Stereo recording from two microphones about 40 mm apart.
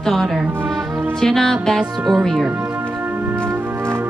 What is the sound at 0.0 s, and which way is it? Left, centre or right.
Music, centre.